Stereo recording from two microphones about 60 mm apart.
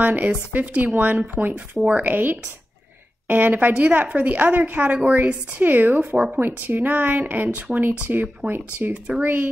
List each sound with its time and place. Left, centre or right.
0.0 s a woman's voice: right
6.1 s speech: centre
6.4 s speech: right